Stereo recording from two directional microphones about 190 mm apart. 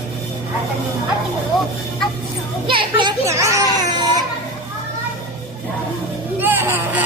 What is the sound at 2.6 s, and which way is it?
Children playing, 25° right (ahead or behind).